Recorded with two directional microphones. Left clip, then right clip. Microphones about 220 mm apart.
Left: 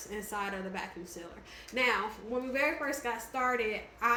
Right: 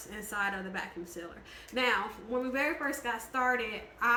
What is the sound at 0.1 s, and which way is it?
Speech, 15° right (ahead or behind).